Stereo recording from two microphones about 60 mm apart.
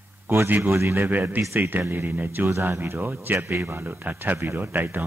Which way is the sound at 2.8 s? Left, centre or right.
Right.